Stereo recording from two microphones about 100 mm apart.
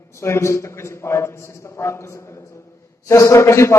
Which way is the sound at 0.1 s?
25° left (ahead or behind).